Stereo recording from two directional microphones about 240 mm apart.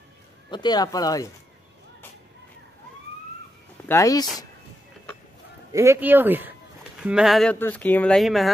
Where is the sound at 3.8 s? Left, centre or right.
Centre.